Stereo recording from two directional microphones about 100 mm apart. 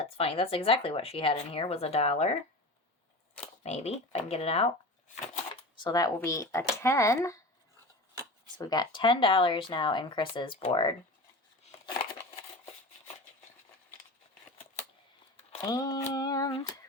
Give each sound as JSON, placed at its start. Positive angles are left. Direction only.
{"t": 0.0, "sound": "speech", "side_deg": 70}
{"t": 3.6, "sound": "speech", "side_deg": 90}
{"t": 5.8, "sound": "speech", "side_deg": 40}
{"t": 8.5, "sound": "speech", "side_deg": 45}
{"t": 15.6, "sound": "speech", "side_deg": 40}